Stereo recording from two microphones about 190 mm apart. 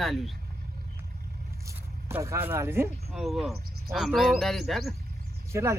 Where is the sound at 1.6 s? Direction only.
15° right (ahead or behind).